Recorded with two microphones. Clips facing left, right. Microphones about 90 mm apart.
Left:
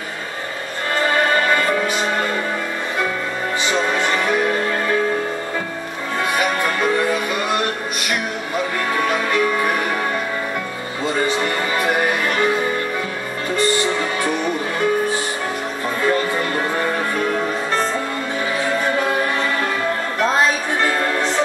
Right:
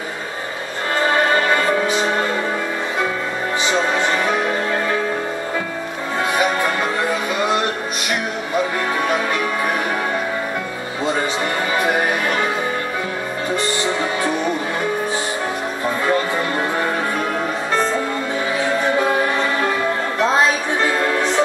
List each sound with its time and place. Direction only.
1.0 s music: 20° right (ahead or behind)
3.7 s music: 10° right (ahead or behind)
6.3 s music: 20° right (ahead or behind)
9.1 s music: 10° right (ahead or behind)
11.1 s music: 15° right (ahead or behind)
16.1 s music: 5° right (ahead or behind)
18.8 s music: 10° right (ahead or behind)
20.8 s music: 5° right (ahead or behind)